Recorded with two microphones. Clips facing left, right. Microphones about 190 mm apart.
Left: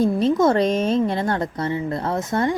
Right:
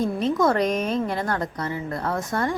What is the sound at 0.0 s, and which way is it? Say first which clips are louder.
A woman's voice: left 4 dB; 30° left (ahead or behind).